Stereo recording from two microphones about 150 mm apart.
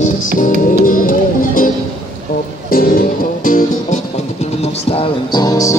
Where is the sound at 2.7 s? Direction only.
75° left (ahead or behind).